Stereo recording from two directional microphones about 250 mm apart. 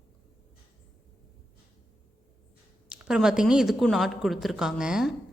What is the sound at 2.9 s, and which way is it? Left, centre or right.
A woman's voice, centre.